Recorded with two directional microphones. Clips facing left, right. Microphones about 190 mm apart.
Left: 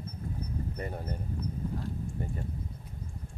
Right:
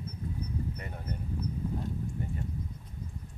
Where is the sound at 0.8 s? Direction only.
35° left (ahead or behind).